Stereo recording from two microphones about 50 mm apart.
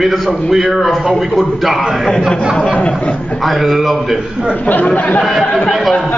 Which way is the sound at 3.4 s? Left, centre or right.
Centre.